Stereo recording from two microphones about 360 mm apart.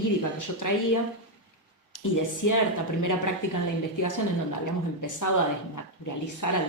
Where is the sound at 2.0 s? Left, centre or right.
Left.